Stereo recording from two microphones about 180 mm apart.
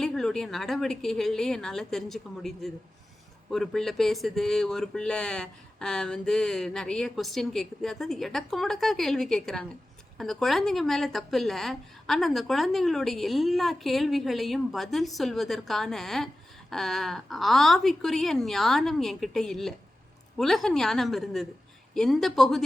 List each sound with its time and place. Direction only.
0.0 s a woman's voice: centre (ahead or behind)